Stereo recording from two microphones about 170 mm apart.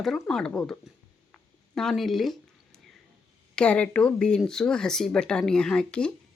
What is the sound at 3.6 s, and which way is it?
Speech, 5° left (ahead or behind).